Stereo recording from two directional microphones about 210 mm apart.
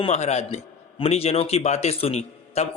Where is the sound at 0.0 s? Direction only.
30° left (ahead or behind).